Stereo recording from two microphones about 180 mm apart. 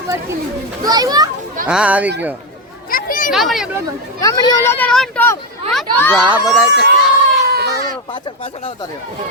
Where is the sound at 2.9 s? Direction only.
50° left (ahead or behind).